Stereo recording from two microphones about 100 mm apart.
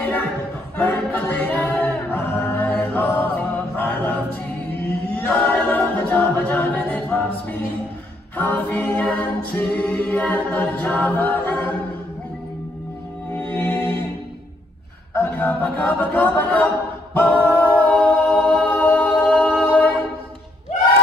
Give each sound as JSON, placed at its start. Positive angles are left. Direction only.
{"t": 0.0, "sound": "a sound", "side_deg": 20}
{"t": 0.7, "sound": "music", "side_deg": 15}
{"t": 5.1, "sound": "a capella", "side_deg": 15}
{"t": 13.3, "sound": "music", "side_deg": 15}
{"t": 15.1, "sound": "a sound", "side_deg": 15}
{"t": 17.1, "sound": "a capella", "side_deg": 15}